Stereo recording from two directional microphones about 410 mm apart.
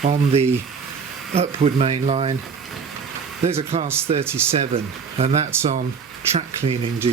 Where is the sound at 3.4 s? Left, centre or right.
Centre.